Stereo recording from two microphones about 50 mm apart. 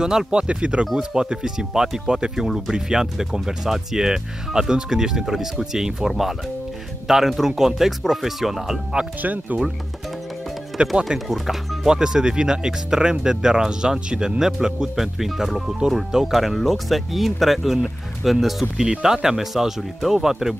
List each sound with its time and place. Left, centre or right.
0.0 s speech: centre
9.2 s speech: right
10.8 s speech: right
11.2 s speech: centre
14.4 s speech: centre